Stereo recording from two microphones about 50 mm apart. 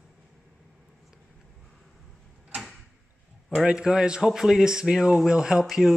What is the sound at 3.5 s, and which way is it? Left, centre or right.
Speech, centre.